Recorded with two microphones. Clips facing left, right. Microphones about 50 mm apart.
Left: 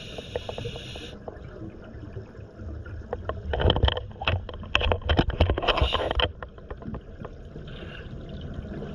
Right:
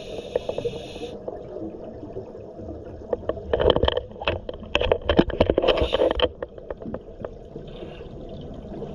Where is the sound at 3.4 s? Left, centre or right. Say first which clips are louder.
Right 6 dB; centre.